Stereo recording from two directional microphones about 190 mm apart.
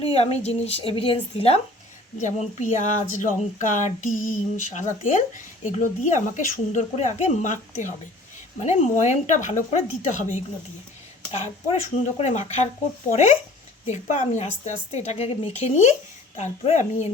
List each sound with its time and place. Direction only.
0.1 s speech: 35° left (ahead or behind)
13.8 s speech: 35° left (ahead or behind)